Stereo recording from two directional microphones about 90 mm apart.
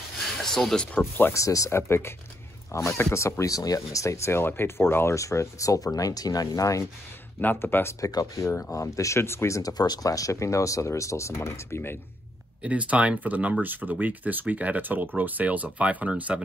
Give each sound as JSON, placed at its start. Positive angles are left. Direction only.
{"t": 0.4, "sound": "speech", "side_deg": 5}
{"t": 1.3, "sound": "speech", "side_deg": 35}
{"t": 7.3, "sound": "speech", "side_deg": 25}
{"t": 8.0, "sound": "speech", "side_deg": 40}
{"t": 8.5, "sound": "speech", "side_deg": 25}
{"t": 8.7, "sound": "speech", "side_deg": 35}
{"t": 9.6, "sound": "speech", "side_deg": 45}
{"t": 12.6, "sound": "speech", "side_deg": -15}